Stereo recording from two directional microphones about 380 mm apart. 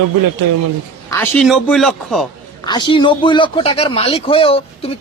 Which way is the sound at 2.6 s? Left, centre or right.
Centre.